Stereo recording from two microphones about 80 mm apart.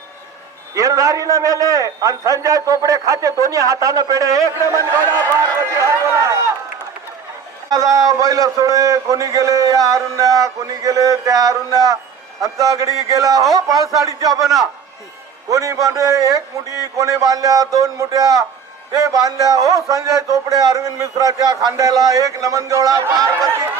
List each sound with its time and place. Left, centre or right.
0.8 s a man's voice: right
7.7 s a man's voice: right
14.4 s a man's voice: centre
15.4 s a man's voice: right